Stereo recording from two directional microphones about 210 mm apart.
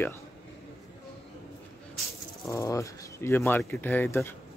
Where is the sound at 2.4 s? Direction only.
15° left (ahead or behind).